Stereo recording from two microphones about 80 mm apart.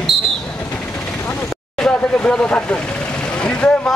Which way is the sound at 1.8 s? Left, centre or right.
Centre.